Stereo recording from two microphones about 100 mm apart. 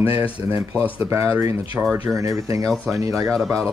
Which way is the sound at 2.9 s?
30° right (ahead or behind).